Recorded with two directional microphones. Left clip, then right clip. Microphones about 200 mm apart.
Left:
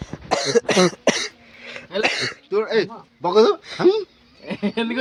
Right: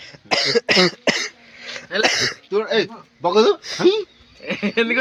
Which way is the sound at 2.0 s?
25° right (ahead or behind).